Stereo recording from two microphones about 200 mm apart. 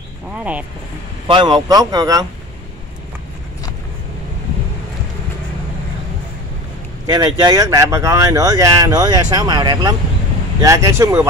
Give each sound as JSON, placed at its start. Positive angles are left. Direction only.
{"t": 0.4, "sound": "speech", "side_deg": -5}
{"t": 1.2, "sound": "speech", "side_deg": -25}
{"t": 7.1, "sound": "speech", "side_deg": -20}